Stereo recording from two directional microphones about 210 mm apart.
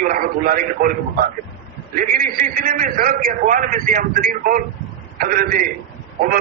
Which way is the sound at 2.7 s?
40° right (ahead or behind).